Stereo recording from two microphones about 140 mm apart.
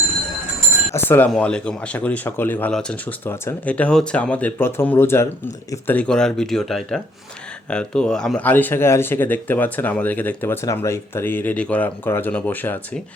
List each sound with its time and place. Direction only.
0.9 s speech: 15° left (ahead or behind)